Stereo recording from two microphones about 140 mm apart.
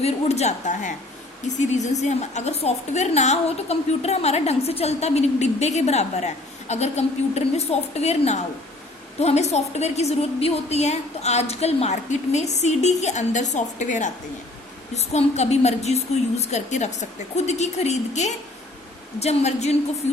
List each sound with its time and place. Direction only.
0.0 s a woman's voice: 50° left (ahead or behind)
14.9 s a woman's voice: 50° left (ahead or behind)